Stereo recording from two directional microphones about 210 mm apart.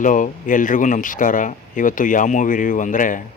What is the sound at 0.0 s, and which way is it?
Speech, 40° left (ahead or behind).